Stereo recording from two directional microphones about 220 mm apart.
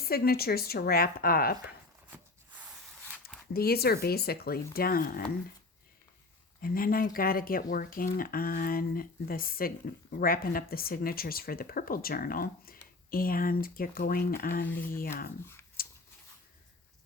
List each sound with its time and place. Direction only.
0.0 s speech: 45° left (ahead or behind)
3.5 s speech: 45° left (ahead or behind)
6.6 s speech: 40° left (ahead or behind)
14.7 s speech: 10° left (ahead or behind)
15.8 s a sound: 40° left (ahead or behind)